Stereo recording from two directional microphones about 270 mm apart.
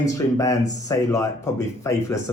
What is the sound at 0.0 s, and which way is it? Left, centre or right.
A man's voice, centre.